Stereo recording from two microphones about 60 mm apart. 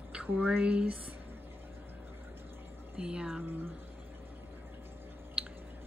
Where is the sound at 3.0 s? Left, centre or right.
Centre.